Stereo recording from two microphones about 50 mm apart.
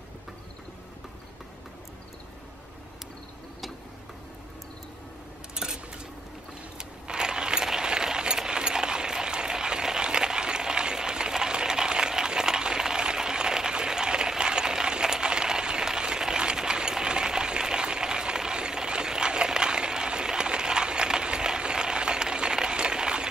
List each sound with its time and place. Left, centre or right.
5.5 s cutlery: centre
6.8 s keys jangling: centre